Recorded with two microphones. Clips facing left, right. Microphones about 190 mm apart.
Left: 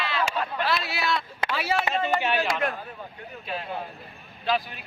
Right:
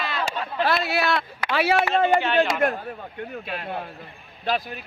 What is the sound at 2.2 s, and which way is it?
Speech, 10° left (ahead or behind).